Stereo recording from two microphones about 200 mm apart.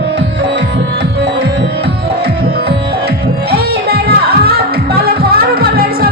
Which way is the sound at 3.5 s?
50° right (ahead or behind).